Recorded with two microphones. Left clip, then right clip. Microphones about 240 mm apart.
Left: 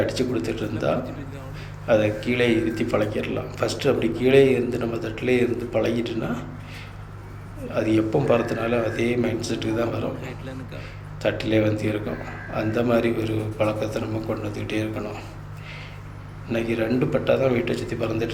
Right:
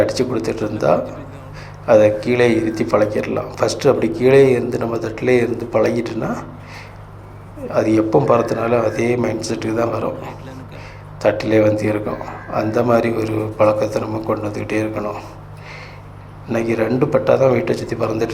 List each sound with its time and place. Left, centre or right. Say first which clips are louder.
0.0 s a man's voice: right 7 dB; centre
7.7 s a man's voice: right 7 dB; centre
8.4 s speech: right 7 dB; centre
8.6 s a man's voice: right 7 dB; centre
10.2 s speech: right 5 dB; centre
11.2 s a man's voice: right 8 dB; centre
16.5 s a man's voice: right 6 dB; centre